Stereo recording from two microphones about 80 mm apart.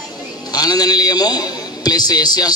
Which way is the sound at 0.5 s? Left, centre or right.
Left.